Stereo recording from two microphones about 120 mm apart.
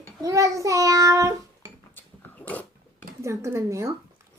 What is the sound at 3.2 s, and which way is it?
Child singing, 25° right (ahead or behind).